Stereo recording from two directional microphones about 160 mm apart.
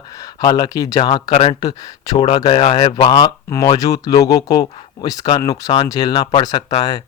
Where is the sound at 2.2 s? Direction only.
40° left (ahead or behind).